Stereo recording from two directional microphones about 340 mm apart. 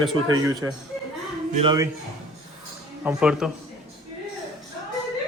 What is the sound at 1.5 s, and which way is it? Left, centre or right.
Speech, centre.